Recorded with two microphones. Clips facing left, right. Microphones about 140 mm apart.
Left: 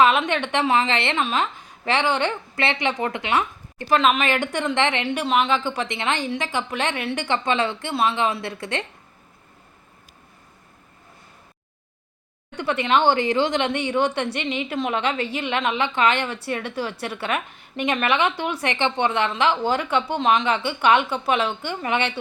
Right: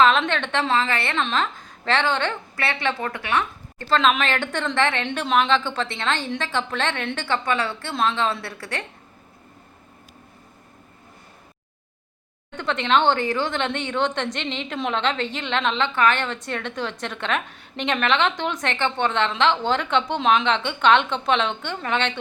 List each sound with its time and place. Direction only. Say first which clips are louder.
0.0 s speech: even; 10° left (ahead or behind)
1.2 s a woman's voice: left 1 dB; 10° left (ahead or behind)
5.0 s speech: even; 5° left (ahead or behind)
7.3 s a woman's voice: left 1 dB; 20° left (ahead or behind)
12.5 s speech: even; 10° left (ahead or behind)